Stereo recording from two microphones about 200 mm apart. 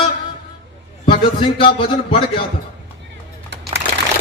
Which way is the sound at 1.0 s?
25° left (ahead or behind).